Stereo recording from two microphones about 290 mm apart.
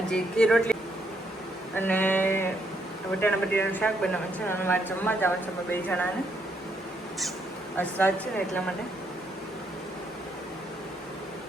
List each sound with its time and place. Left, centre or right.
0.1 s a woman's voice: centre
7.8 s a woman's voice: centre